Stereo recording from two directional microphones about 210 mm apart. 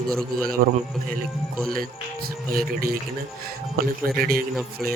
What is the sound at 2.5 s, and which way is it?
Speech, 45° right (ahead or behind).